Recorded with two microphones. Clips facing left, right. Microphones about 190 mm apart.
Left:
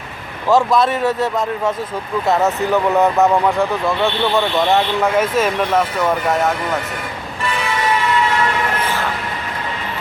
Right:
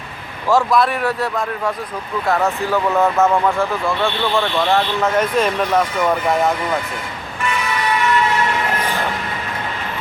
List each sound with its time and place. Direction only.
0.5 s speech: 20° left (ahead or behind)
5.1 s speech: 5° left (ahead or behind)